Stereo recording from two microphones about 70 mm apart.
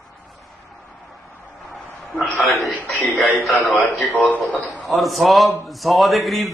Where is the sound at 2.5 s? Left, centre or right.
Left.